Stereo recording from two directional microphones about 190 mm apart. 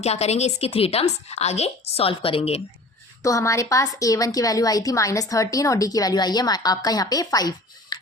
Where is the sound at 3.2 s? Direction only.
15° left (ahead or behind).